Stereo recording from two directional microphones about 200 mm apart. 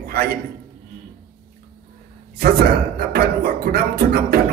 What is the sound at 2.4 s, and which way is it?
Speech, 50° right (ahead or behind).